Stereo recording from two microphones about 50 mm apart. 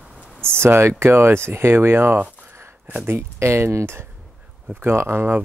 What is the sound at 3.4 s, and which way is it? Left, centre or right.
Speech, right.